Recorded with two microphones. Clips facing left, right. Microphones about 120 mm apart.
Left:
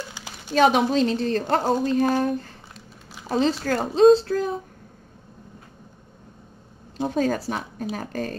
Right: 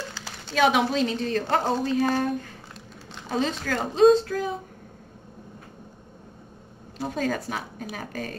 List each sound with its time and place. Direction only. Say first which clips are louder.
0.1 s a sound: left 4 dB; 15° left (ahead or behind)
0.6 s a woman's voice: left 3 dB; 40° left (ahead or behind)
7.1 s a woman's voice: left 4 dB; 40° left (ahead or behind)